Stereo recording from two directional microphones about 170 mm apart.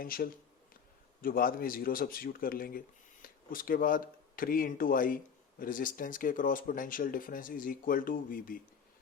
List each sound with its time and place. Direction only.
0.0 s speech: 60° left (ahead or behind)